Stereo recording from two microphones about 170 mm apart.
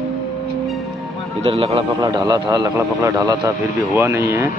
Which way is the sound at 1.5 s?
35° right (ahead or behind).